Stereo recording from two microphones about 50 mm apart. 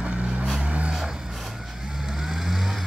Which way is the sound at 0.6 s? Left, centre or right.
Right.